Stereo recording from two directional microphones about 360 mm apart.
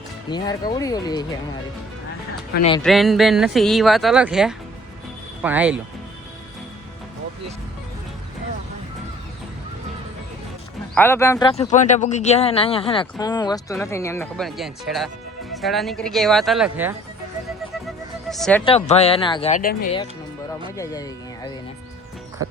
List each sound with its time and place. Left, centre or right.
0.3 s speech: centre
2.8 s speech: centre
10.9 s speech: centre
18.3 s speech: centre
18.6 s speech: centre
20.7 s speech: centre